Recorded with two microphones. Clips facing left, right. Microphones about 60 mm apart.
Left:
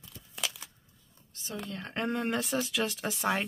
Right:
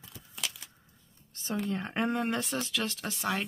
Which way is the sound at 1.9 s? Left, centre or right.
Centre.